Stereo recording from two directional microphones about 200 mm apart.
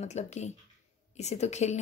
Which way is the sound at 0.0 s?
35° left (ahead or behind).